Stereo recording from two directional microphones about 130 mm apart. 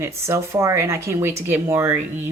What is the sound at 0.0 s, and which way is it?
Speech, 25° right (ahead or behind).